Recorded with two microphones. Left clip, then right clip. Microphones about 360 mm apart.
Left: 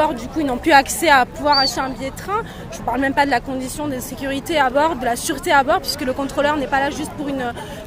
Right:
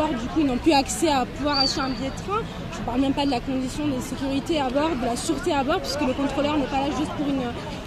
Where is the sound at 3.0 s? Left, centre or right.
Left.